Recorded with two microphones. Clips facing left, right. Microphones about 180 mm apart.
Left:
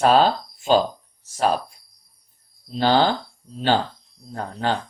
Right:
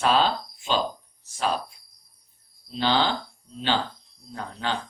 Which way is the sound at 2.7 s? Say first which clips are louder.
Left 5 dB; 45° left (ahead or behind).